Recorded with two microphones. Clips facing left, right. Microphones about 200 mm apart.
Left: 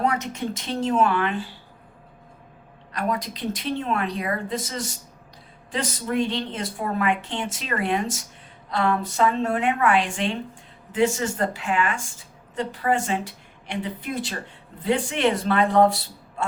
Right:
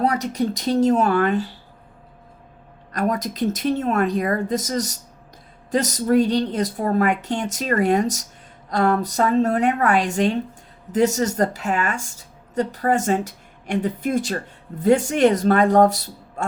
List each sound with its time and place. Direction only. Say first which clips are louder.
0.0 s a woman's voice: right 4 dB; 35° right (ahead or behind)
2.9 s a woman's voice: right 4 dB; 45° right (ahead or behind)